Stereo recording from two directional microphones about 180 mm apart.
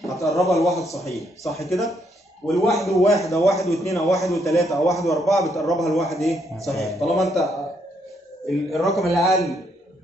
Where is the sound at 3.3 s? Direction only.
15° left (ahead or behind).